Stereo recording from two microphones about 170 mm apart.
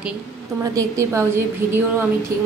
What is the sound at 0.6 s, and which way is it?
A woman's voice, 20° right (ahead or behind).